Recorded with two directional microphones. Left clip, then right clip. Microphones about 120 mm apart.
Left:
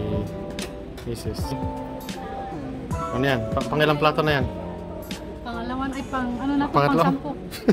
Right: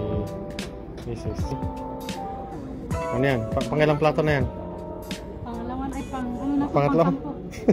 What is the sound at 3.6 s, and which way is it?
Speech, centre (ahead or behind).